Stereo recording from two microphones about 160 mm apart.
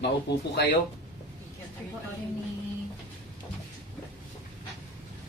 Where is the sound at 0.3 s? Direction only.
90° left.